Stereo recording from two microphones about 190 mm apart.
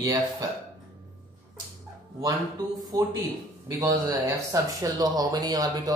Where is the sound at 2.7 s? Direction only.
20° right (ahead or behind).